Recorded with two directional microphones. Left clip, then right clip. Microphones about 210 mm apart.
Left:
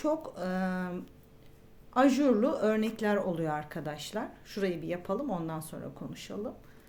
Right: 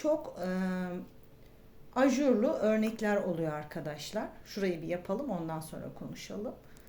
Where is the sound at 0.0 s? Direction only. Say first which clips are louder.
Even; 15° left (ahead or behind).